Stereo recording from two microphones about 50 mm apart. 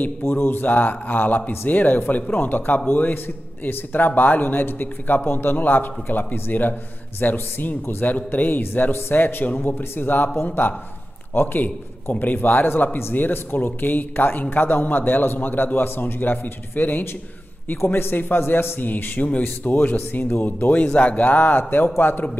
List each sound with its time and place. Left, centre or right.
0.3 s a man's voice: left
18.8 s a man's voice: left
21.2 s a man's voice: left